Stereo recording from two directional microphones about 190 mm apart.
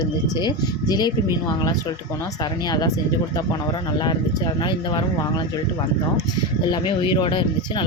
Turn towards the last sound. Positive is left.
turn(degrees=25)  # may be behind; listen again after turning